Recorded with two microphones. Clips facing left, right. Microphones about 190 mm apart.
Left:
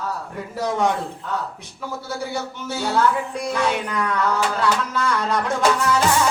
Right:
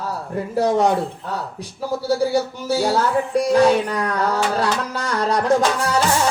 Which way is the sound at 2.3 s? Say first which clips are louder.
Right 8 dB; 35° right (ahead or behind).